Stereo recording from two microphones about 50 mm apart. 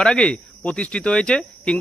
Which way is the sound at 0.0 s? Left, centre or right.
Centre.